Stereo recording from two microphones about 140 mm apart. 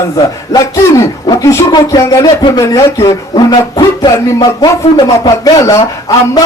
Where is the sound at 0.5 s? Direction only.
25° left (ahead or behind).